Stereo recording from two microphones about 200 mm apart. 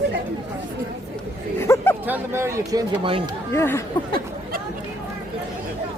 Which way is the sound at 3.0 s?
25° right (ahead or behind).